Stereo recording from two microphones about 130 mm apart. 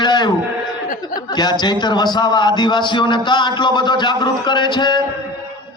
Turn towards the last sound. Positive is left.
turn(degrees=35)  # may be behind; listen again after turning